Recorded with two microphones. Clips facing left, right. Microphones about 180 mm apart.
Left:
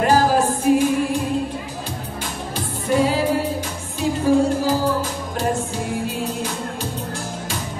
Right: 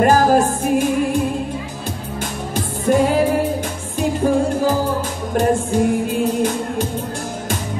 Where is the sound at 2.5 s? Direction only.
50° right (ahead or behind).